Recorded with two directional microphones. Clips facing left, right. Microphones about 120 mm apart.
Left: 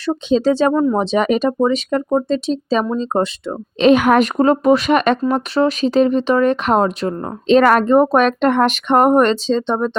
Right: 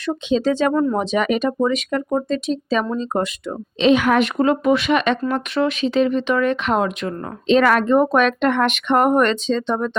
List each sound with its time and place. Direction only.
0.0 s speech: 35° left (ahead or behind)
0.7 s speech: 15° left (ahead or behind)
0.9 s speech: 30° left (ahead or behind)
3.8 s speech: 50° left (ahead or behind); by 10.0 s 30° left (ahead or behind)